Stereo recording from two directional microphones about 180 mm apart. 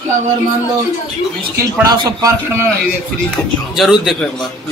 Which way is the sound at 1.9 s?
20° right (ahead or behind).